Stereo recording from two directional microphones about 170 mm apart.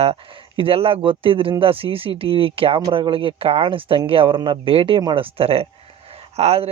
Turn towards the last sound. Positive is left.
turn(degrees=-40)  # may be behind; listen again after turning